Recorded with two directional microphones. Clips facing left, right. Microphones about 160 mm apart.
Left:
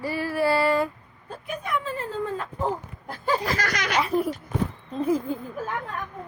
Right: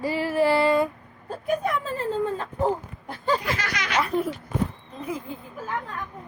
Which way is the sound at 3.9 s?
Centre (ahead or behind).